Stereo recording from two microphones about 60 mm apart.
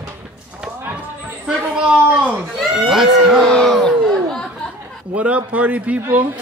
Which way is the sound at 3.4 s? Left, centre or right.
Centre.